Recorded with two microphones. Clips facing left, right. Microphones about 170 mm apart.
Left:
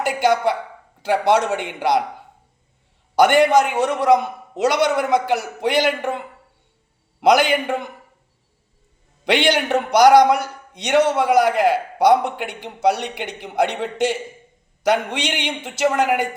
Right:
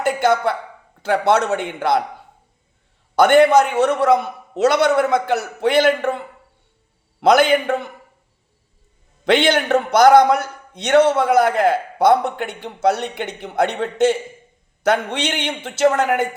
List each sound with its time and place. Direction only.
0.2 s a man's voice: 15° left (ahead or behind)
3.4 s a man's voice: 15° left (ahead or behind)
9.3 s a man's voice: 15° left (ahead or behind)